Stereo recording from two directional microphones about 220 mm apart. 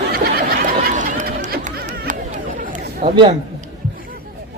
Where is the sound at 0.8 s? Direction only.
35° right (ahead or behind).